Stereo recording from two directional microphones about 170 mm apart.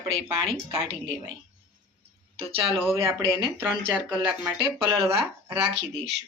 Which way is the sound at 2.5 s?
35° right (ahead or behind).